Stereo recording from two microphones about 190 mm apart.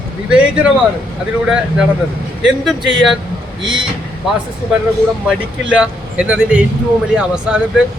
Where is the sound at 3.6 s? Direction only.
25° right (ahead or behind).